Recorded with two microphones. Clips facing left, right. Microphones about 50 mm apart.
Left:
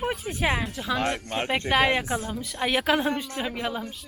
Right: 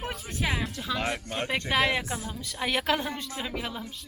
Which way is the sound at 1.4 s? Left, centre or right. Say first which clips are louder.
Left 3 dB; left.